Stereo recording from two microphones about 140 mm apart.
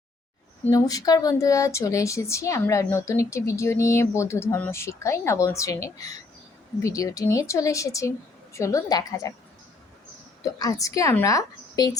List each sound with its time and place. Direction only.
0.7 s speech: 25° left (ahead or behind)
10.4 s speech: 25° left (ahead or behind)